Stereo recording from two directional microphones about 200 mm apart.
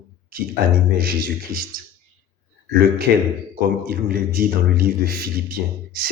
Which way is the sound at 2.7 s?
50° right (ahead or behind).